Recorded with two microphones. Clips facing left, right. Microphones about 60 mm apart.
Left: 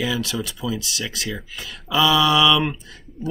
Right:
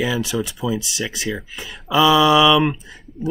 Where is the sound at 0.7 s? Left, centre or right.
Centre.